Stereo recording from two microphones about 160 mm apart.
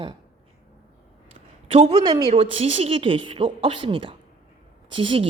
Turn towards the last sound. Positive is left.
turn(degrees=-35)  # may be behind; listen again after turning